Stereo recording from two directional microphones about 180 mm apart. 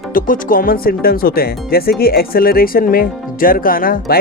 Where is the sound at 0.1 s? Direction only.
50° left (ahead or behind).